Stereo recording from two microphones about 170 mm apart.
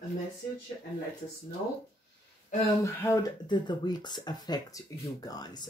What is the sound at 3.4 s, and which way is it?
Speech, 25° left (ahead or behind).